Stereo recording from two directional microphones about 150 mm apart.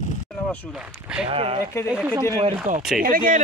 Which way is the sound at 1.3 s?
40° right (ahead or behind).